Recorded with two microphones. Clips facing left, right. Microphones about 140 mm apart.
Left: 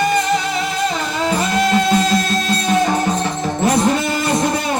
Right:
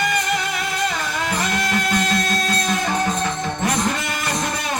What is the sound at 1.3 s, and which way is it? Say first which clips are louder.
Music: left 7 dB; 25° left (ahead or behind).